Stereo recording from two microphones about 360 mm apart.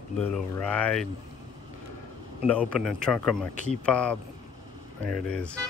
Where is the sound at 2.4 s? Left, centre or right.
Centre.